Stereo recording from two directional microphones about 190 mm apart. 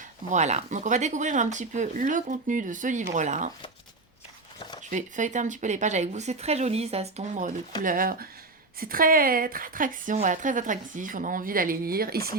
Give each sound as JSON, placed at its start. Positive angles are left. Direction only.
{"t": 0.3, "sound": "speech", "side_deg": -35}
{"t": 4.9, "sound": "a woman's voice", "side_deg": -40}